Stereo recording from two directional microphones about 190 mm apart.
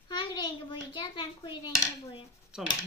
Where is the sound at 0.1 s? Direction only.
25° left (ahead or behind).